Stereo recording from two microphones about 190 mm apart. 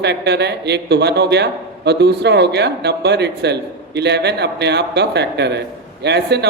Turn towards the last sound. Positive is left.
turn(degrees=-60)  # may be behind; listen again after turning